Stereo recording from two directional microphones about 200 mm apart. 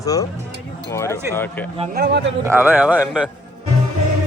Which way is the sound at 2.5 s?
10° right (ahead or behind).